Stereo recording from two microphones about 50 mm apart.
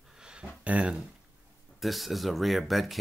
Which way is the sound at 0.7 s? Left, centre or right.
Right.